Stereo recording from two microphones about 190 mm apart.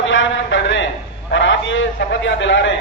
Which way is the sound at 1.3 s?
75° left (ahead or behind).